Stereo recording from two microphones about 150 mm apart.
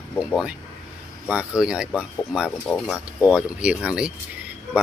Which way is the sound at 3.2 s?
5° right (ahead or behind).